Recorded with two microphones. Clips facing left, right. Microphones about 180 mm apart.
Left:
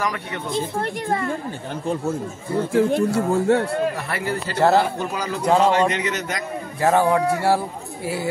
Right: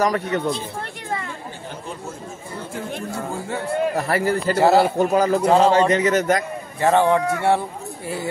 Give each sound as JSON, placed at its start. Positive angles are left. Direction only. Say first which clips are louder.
{"t": 0.0, "sound": "speech", "louder": "right 6 dB", "side_deg": -40}
{"t": 2.7, "sound": "speech", "louder": "left 11 dB", "side_deg": 70}
{"t": 3.9, "sound": "speech", "louder": "right 5 dB", "side_deg": -40}
{"t": 4.6, "sound": "a man's voice", "louder": "right 1 dB", "side_deg": -5}
{"t": 4.9, "sound": "a man's voice", "louder": "right 9 dB", "side_deg": -45}
{"t": 6.8, "sound": "a man's voice", "louder": "right 1 dB", "side_deg": 5}